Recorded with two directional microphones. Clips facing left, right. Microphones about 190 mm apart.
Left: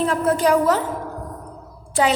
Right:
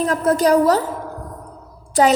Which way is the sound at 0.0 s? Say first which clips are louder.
Right 2 dB; 40° right (ahead or behind).